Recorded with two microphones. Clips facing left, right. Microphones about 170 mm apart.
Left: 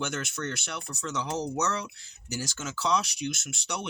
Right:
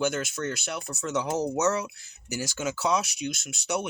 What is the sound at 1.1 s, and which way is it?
Speech, 50° right (ahead or behind).